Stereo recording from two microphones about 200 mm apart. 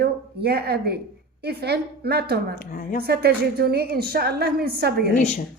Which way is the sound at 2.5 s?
45° left (ahead or behind).